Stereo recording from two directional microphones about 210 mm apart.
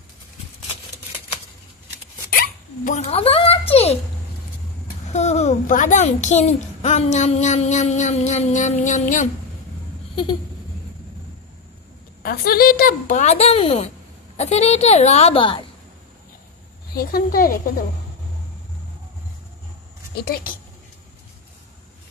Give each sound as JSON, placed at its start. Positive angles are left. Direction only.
{"t": 2.3, "sound": "hiccup", "side_deg": 35}
{"t": 5.1, "sound": "a woman's voice", "side_deg": 30}
{"t": 12.2, "sound": "a woman's voice", "side_deg": 45}
{"t": 16.9, "sound": "speech", "side_deg": 45}